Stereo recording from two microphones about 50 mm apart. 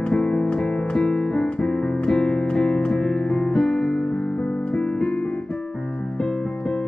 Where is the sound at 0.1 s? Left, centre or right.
Centre.